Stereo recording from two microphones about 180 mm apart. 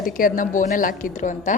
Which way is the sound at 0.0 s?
50° left (ahead or behind).